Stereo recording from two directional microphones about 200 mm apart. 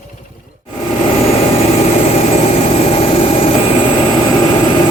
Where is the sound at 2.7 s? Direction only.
30° left (ahead or behind).